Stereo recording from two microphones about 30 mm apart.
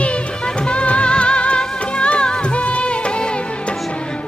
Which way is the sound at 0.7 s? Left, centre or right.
Left.